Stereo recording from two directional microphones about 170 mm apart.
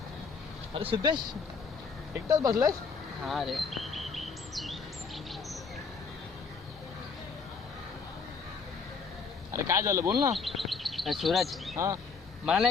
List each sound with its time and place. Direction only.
0.7 s speech: 30° right (ahead or behind)
2.2 s speech: 20° right (ahead or behind)
3.2 s chirp: centre (ahead or behind)
9.5 s speech: 15° right (ahead or behind)
10.3 s speech: centre (ahead or behind)